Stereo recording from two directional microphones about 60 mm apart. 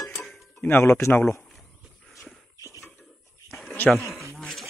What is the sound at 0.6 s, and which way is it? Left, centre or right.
Speech, left.